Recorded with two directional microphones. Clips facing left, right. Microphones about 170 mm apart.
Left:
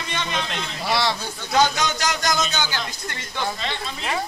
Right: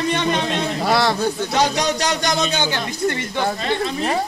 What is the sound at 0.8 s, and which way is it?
Speech, 55° right (ahead or behind).